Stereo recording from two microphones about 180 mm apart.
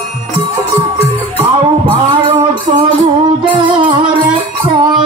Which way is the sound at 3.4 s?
25° right (ahead or behind).